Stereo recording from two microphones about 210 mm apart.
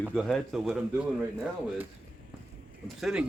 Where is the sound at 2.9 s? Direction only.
Centre (ahead or behind).